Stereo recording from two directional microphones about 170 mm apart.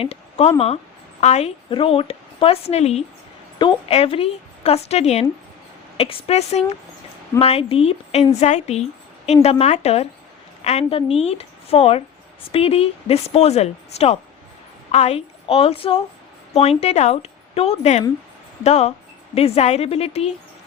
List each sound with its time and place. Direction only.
0.0 s a woman's voice: 35° left (ahead or behind)